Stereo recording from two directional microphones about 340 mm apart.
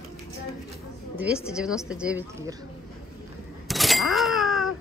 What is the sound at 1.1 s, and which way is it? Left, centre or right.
A woman's voice, centre.